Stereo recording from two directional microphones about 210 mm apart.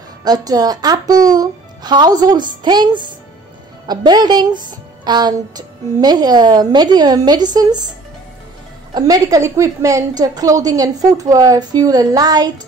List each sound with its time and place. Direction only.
0.2 s speech: 20° right (ahead or behind)
8.9 s a woman's voice: 15° right (ahead or behind)